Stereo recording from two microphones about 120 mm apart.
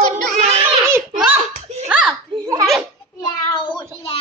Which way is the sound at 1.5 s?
65° right (ahead or behind).